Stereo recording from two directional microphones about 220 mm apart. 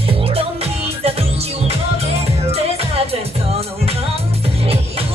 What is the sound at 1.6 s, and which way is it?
Music, 30° right (ahead or behind).